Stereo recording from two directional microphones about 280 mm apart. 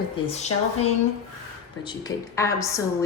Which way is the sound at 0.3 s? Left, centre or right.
Left.